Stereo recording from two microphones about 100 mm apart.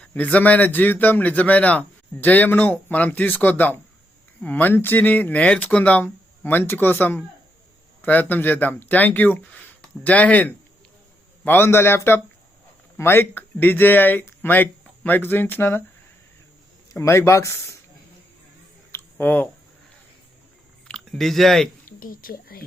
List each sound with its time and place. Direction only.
0.1 s speech: 15° left (ahead or behind)
16.9 s speech: 30° left (ahead or behind)
19.2 s speech: 20° left (ahead or behind)
20.8 s speech: 5° left (ahead or behind)